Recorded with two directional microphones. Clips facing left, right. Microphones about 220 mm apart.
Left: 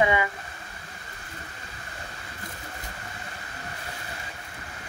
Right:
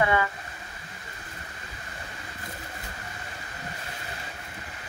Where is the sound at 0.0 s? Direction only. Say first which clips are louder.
Left 1 dB; 15° left (ahead or behind).